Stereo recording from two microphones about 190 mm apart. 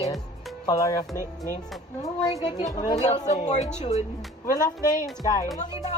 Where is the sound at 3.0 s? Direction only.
35° left (ahead or behind).